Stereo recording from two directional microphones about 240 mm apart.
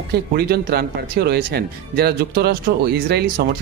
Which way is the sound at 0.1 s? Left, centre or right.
Right.